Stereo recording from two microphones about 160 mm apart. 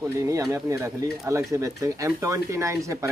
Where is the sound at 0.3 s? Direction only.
20° right (ahead or behind).